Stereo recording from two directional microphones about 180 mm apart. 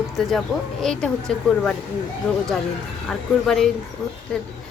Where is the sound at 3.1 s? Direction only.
Centre (ahead or behind).